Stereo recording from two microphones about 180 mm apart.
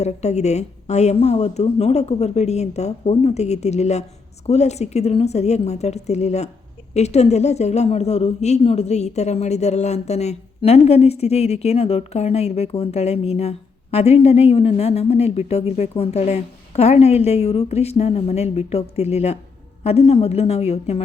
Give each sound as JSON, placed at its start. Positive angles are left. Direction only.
{"t": 0.0, "sound": "a woman's voice", "side_deg": 40}